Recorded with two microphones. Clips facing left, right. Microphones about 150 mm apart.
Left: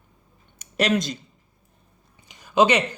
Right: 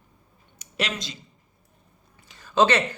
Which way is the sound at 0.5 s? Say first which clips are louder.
Left 7 dB; 45° left (ahead or behind).